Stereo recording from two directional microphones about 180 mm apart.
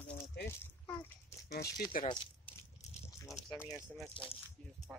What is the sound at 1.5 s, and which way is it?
Speech, 60° left (ahead or behind).